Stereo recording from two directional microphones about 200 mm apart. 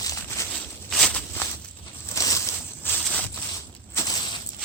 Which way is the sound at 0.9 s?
5° left (ahead or behind).